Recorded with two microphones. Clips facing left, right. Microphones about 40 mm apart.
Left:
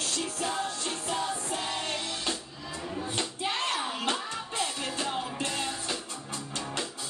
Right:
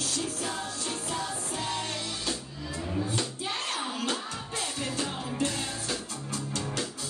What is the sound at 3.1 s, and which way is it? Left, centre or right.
Music, left.